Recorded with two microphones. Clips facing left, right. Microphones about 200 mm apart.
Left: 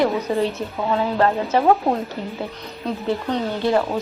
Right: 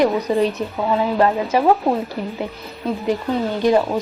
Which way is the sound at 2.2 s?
65° right (ahead or behind).